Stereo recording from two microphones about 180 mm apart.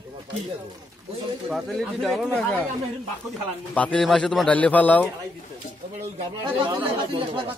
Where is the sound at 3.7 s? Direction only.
5° left (ahead or behind).